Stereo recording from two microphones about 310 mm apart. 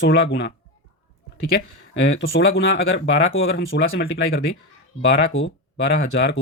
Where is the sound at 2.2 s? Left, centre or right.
Left.